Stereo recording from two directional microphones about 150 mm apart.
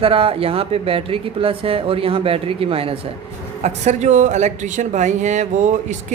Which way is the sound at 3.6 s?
50° right (ahead or behind).